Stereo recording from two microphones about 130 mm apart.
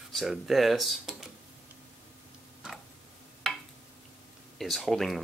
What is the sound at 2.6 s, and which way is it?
Tick-tock, 5° right (ahead or behind).